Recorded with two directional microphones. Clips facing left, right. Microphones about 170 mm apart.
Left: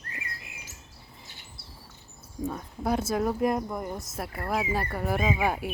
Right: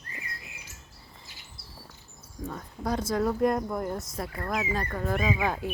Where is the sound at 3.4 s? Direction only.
Centre (ahead or behind).